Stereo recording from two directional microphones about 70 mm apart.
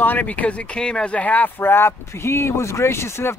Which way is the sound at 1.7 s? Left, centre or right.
Left.